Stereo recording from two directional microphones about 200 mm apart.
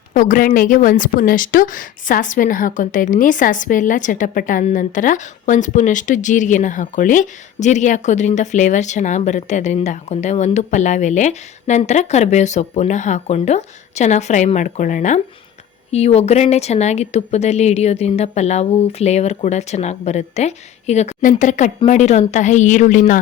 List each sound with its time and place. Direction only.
0.1 s a woman's voice: 40° left (ahead or behind)